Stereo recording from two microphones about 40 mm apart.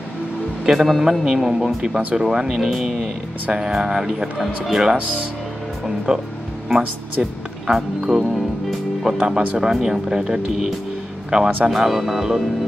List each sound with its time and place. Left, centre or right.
0.7 s speech: centre
5.9 s speech: centre